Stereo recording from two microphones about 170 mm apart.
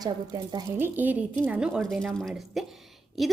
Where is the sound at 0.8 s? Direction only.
10° right (ahead or behind).